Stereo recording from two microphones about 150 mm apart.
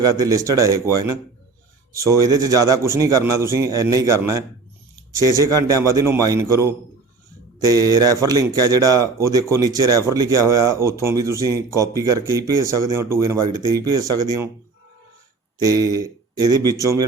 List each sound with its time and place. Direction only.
0.0 s speech: 25° right (ahead or behind)
1.9 s speech: 20° right (ahead or behind)
15.6 s speech: 25° right (ahead or behind)